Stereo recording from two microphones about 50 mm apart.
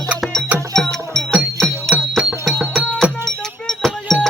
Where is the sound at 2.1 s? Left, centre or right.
Centre.